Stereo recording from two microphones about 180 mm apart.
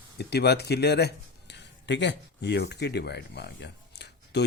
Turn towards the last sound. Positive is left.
turn(degrees=70)  # may be behind; listen again after turning